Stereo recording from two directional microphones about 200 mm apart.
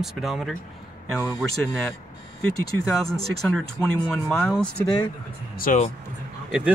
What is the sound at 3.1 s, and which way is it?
Speech, centre (ahead or behind).